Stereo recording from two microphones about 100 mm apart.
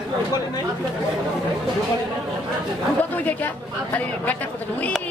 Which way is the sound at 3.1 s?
20° left (ahead or behind).